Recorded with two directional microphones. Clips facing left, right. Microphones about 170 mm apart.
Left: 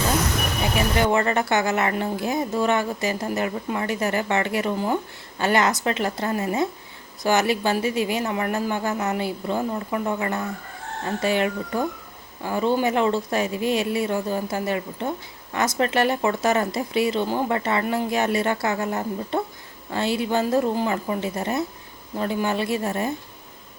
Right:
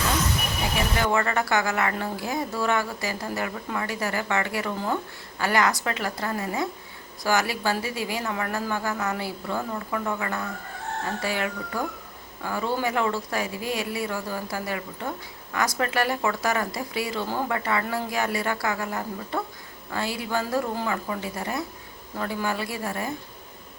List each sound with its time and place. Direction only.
0.9 s a woman's voice: 20° left (ahead or behind)